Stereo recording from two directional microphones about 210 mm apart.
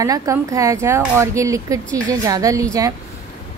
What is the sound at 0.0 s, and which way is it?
Speech, 15° right (ahead or behind).